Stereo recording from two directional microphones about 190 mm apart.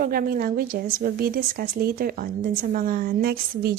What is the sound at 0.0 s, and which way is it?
Speech, 50° right (ahead or behind).